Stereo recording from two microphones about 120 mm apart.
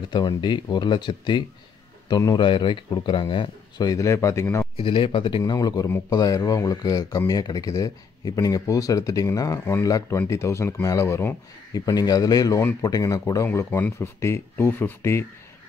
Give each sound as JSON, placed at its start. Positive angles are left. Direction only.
{"t": 0.1, "sound": "speech", "side_deg": 40}
{"t": 4.7, "sound": "speech", "side_deg": 45}
{"t": 5.4, "sound": "speech", "side_deg": 35}